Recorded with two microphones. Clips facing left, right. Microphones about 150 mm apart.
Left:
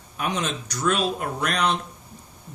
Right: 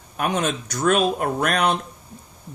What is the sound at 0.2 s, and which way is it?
Speech, 50° right (ahead or behind).